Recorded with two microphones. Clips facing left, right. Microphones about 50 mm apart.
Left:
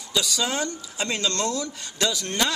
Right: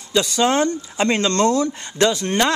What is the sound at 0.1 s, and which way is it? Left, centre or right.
Speech, right.